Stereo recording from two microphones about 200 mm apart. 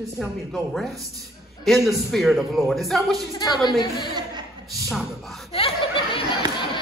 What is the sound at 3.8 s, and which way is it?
Speech, 25° left (ahead or behind).